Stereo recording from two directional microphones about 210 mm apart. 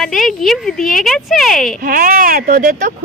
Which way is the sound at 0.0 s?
Centre (ahead or behind).